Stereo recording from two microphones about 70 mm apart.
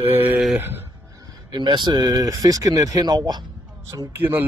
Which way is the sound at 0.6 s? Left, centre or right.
Right.